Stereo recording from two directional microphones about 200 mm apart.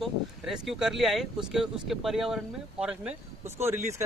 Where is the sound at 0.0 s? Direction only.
Centre (ahead or behind).